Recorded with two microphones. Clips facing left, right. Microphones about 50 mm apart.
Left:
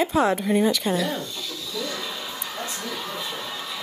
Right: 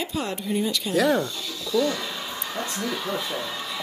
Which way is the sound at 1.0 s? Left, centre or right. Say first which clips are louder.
Right 6 dB; right.